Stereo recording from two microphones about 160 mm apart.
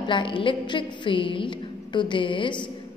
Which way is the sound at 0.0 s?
30° left (ahead or behind).